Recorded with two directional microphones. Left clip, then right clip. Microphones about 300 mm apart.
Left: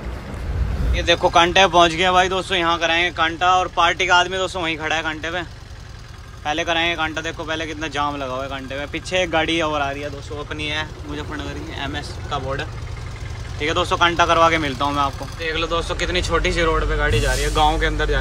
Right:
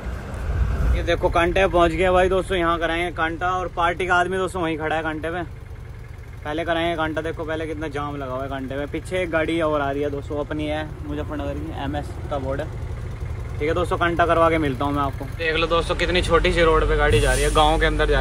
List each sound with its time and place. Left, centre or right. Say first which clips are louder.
0.9 s speech: left 5 dB; centre